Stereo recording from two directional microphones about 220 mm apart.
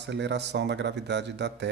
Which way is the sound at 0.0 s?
50° right (ahead or behind).